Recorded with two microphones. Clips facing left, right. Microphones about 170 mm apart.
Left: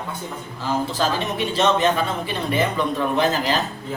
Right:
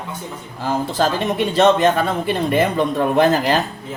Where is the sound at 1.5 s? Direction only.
50° right (ahead or behind).